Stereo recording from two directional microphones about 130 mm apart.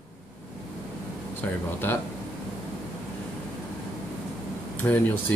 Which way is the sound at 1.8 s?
15° left (ahead or behind).